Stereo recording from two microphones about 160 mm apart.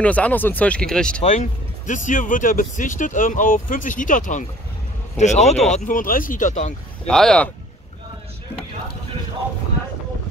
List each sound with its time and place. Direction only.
0.0 s speech: 10° left (ahead or behind)
1.2 s speech: 45° left (ahead or behind)
5.6 s speech: centre (ahead or behind)
5.9 s speech: 60° left (ahead or behind)
7.1 s speech: 5° left (ahead or behind)